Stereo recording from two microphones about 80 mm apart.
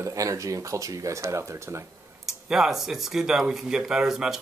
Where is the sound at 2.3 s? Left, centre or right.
Centre.